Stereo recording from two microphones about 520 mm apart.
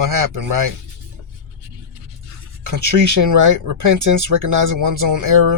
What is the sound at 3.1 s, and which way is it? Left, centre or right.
Speech, right.